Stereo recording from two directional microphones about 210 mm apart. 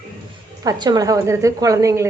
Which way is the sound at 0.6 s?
20° right (ahead or behind).